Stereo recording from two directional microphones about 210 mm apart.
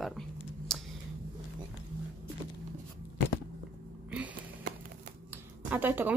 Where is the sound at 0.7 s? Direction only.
Centre (ahead or behind).